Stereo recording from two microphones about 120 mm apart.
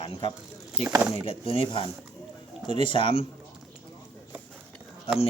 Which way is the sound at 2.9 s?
50° left (ahead or behind).